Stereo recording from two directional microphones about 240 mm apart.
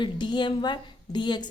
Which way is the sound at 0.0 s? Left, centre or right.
Centre.